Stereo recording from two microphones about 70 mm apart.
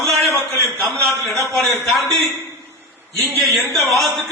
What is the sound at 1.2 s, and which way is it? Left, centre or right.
Speech, centre.